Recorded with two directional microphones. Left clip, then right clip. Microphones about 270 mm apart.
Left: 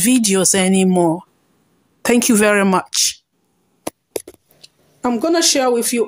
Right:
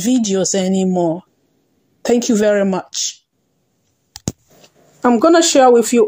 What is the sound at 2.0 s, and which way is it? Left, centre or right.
Speech, centre.